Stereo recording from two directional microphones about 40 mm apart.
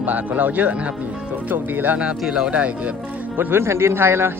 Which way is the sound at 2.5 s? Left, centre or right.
Right.